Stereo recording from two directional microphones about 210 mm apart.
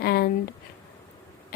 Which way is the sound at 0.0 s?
50° left (ahead or behind).